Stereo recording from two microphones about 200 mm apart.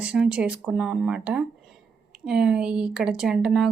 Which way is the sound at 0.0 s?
5° right (ahead or behind).